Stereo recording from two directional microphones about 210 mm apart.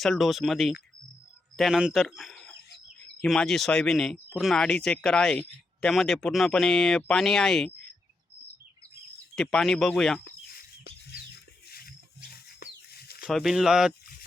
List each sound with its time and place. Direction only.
0.0 s speech: centre (ahead or behind)
9.3 s speech: centre (ahead or behind)
10.2 s bird: 50° left (ahead or behind)
11.7 s a sound: 45° left (ahead or behind)
13.2 s speech: centre (ahead or behind)